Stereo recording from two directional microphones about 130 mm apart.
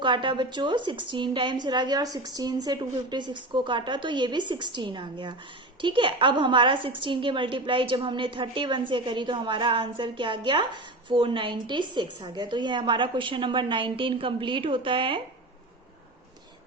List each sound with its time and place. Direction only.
0.0 s a woman's voice: 40° right (ahead or behind)